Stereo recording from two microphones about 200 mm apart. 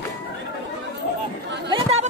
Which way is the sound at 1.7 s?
35° right (ahead or behind).